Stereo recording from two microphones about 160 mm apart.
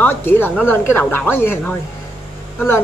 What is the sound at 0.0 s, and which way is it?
A woman's voice, 15° left (ahead or behind).